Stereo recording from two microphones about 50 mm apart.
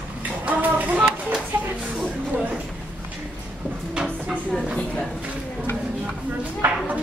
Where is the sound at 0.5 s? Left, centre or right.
Right.